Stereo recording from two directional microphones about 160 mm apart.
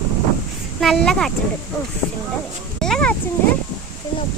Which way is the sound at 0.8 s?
Centre (ahead or behind).